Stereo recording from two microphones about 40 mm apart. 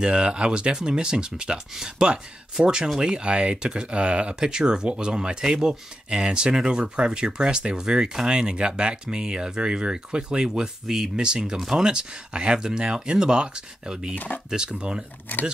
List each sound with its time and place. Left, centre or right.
0.0 s speech: centre
4.5 s speech: centre
14.1 s speech: left
14.5 s speech: right